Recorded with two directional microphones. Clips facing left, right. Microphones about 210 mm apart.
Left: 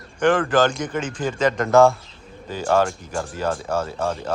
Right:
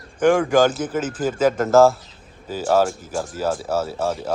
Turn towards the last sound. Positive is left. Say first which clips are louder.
# right 1 dB
turn(degrees=-5)  # may be behind; listen again after turning